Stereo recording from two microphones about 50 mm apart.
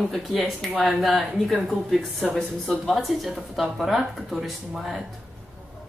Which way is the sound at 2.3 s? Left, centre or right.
Centre.